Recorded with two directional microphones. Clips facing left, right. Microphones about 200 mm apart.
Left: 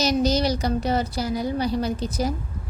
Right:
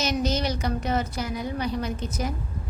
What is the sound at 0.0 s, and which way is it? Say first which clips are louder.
A woman's voice: left 5 dB; 35° left (ahead or behind).